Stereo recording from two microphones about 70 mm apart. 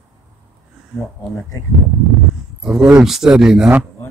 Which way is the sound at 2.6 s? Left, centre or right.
Centre.